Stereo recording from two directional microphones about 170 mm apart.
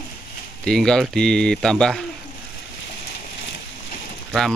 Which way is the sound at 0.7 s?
5° left (ahead or behind).